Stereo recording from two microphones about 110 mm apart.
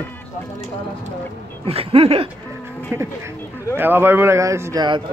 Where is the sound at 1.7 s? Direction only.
65° right (ahead or behind).